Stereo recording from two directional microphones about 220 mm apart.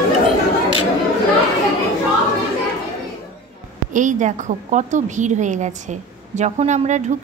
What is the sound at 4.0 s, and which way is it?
A woman's voice, 35° right (ahead or behind).